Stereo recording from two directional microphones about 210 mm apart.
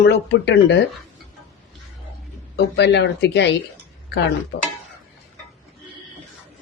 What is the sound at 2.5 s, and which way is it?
A woman's voice, 55° left (ahead or behind).